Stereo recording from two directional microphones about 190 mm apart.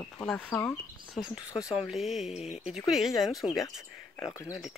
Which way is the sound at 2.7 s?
Centre (ahead or behind).